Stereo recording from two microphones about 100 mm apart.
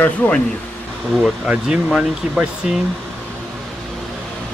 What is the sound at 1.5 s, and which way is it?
Speech, 10° right (ahead or behind).